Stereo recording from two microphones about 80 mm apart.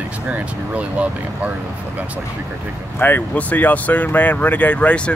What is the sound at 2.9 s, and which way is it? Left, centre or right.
Speech, left.